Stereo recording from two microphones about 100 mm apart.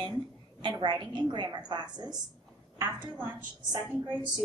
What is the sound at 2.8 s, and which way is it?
Speech, 25° right (ahead or behind).